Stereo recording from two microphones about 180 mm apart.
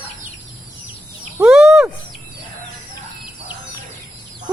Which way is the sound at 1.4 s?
5° right (ahead or behind).